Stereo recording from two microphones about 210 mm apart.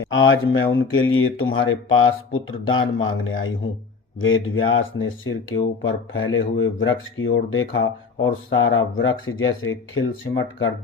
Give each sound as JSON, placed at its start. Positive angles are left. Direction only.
{"t": 0.0, "sound": "speech", "side_deg": 65}